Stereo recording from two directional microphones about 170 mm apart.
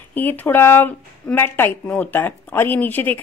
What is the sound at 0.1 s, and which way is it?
A woman's voice, 10° left (ahead or behind).